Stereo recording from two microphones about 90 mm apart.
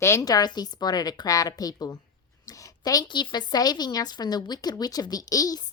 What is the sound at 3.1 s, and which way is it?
A woman's voice, 55° left (ahead or behind).